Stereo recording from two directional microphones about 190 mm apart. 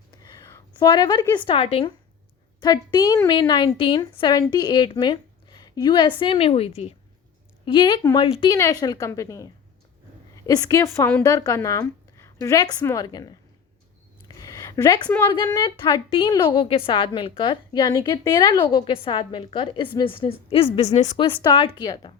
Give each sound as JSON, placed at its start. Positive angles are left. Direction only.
{"t": 0.2, "sound": "a woman's voice", "side_deg": 15}
{"t": 14.3, "sound": "a sound", "side_deg": 20}
{"t": 15.3, "sound": "a woman's voice", "side_deg": 20}
{"t": 21.2, "sound": "a woman's voice", "side_deg": 25}